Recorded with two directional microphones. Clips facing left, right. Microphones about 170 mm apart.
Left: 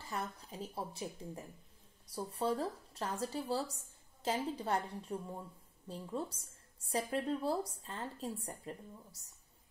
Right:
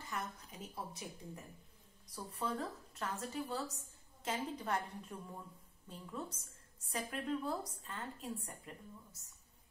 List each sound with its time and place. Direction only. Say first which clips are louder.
0.0 s a woman's voice: left 3 dB; 30° left (ahead or behind)